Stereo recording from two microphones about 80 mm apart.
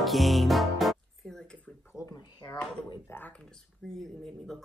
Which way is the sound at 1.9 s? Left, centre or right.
Left.